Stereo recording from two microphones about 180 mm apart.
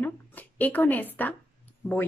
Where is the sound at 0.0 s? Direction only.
10° left (ahead or behind).